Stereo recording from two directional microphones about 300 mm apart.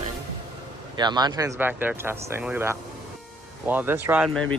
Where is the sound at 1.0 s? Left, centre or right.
Centre.